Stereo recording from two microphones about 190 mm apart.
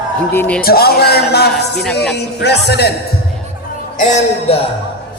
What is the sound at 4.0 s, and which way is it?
Speech, 40° left (ahead or behind).